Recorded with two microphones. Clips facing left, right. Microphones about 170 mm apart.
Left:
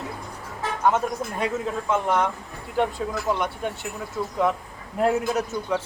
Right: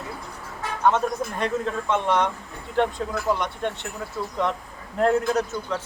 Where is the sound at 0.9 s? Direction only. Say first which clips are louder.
Right 1 dB; 5° left (ahead or behind).